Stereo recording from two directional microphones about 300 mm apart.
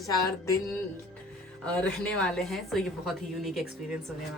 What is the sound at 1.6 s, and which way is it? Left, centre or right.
A woman's voice, centre.